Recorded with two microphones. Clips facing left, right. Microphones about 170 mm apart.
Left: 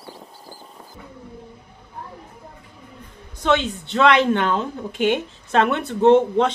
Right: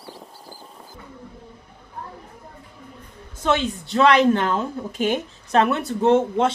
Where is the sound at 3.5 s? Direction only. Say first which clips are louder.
Left 3 dB; 40° right (ahead or behind).